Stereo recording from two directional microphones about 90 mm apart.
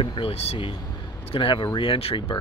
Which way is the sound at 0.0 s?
70° left (ahead or behind).